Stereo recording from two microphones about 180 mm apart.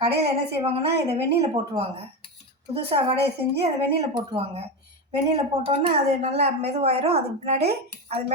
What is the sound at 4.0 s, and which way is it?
A woman's voice, 25° right (ahead or behind).